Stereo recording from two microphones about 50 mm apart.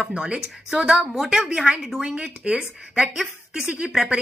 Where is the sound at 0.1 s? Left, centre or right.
Right.